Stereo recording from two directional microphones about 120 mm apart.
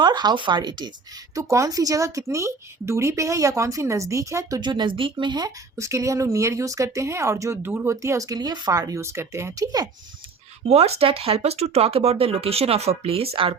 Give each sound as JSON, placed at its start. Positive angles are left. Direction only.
{"t": 0.0, "sound": "speech", "side_deg": -40}
{"t": 1.4, "sound": "speech", "side_deg": -25}
{"t": 10.7, "sound": "speech", "side_deg": -60}